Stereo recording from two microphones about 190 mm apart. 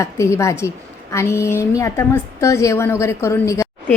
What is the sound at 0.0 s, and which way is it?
A woman's voice, 15° left (ahead or behind).